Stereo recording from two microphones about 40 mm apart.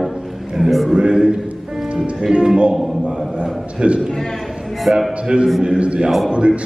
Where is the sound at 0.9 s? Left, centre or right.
Right.